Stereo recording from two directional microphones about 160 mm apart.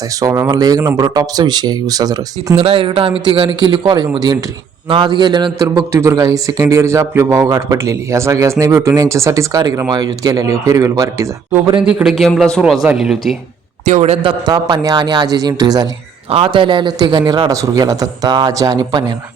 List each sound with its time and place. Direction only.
0.2 s speech: 20° right (ahead or behind)
2.6 s a man's voice: 35° right (ahead or behind)
5.6 s speech: 15° right (ahead or behind)
11.9 s a man's voice: 5° right (ahead or behind)
13.8 s speech: 45° right (ahead or behind); by 19.1 s 25° right (ahead or behind)